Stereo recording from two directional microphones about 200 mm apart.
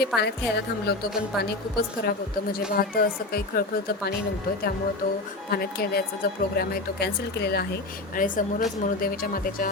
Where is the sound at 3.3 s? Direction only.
50° left (ahead or behind).